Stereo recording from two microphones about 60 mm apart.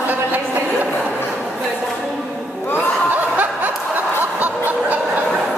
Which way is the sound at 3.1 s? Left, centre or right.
Right.